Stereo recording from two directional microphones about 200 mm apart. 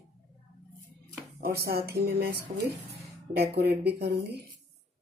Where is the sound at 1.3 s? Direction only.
50° right (ahead or behind).